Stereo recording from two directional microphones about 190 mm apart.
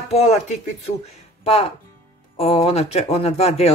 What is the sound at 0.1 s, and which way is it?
Speech, 35° left (ahead or behind).